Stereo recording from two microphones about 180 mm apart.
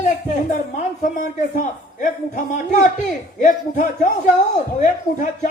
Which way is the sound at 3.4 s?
45° left (ahead or behind).